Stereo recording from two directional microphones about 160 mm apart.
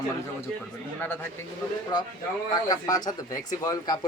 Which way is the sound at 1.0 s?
15° left (ahead or behind).